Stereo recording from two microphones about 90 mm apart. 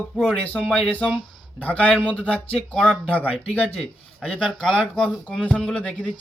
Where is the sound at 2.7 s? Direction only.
Centre (ahead or behind).